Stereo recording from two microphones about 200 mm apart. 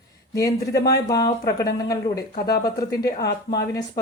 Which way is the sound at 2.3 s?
50° left (ahead or behind).